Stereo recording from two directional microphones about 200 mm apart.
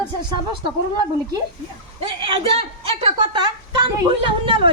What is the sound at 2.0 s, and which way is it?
A woman's voice, 25° right (ahead or behind).